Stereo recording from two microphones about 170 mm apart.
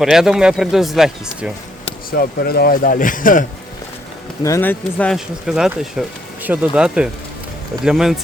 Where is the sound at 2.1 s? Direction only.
60° left (ahead or behind).